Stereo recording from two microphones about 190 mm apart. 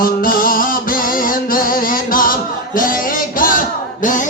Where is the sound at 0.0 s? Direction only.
50° left (ahead or behind).